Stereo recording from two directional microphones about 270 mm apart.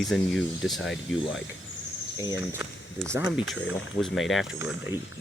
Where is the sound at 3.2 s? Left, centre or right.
Centre.